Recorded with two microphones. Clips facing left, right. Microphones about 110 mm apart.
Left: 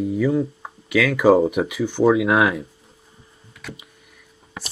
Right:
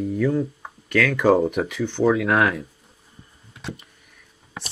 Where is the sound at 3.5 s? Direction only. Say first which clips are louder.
Right 3 dB; 25° right (ahead or behind).